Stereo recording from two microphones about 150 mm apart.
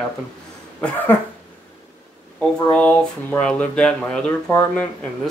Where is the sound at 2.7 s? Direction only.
10° left (ahead or behind).